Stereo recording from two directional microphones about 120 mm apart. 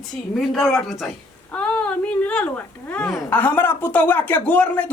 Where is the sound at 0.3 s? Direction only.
Centre (ahead or behind).